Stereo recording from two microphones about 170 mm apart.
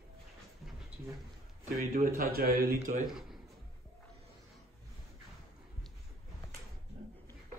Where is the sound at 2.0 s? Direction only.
60° right (ahead or behind).